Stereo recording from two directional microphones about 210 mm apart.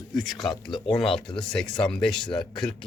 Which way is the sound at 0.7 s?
25° left (ahead or behind).